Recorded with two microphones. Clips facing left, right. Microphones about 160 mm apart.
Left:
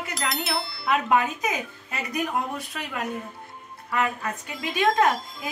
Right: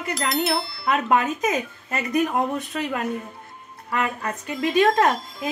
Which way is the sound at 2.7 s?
35° right (ahead or behind).